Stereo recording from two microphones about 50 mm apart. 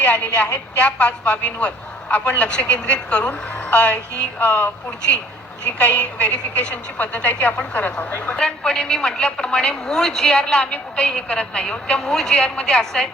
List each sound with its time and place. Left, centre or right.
0.0 s a woman's voice: left
4.4 s a woman's voice: left
5.8 s a woman's voice: left; by 13.1 s centre